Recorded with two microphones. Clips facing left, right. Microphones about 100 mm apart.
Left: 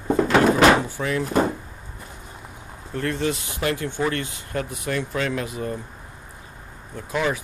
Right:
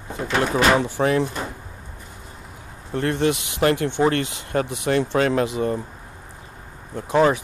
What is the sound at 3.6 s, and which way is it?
Speech, 45° right (ahead or behind).